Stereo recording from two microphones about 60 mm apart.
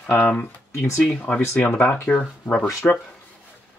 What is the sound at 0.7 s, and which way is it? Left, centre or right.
Speech, left.